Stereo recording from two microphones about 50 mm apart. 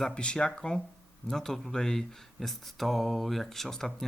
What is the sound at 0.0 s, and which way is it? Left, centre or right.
Speech, centre.